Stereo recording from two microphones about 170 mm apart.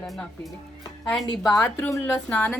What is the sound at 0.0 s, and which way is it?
Speech, 5° left (ahead or behind).